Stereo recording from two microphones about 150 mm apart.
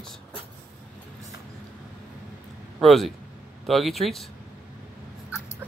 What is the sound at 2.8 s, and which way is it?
Speech, centre (ahead or behind).